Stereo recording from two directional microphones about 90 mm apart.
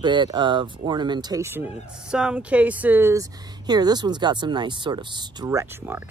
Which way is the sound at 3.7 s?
50° right (ahead or behind).